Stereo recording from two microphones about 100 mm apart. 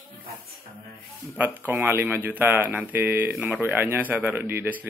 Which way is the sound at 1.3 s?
15° right (ahead or behind).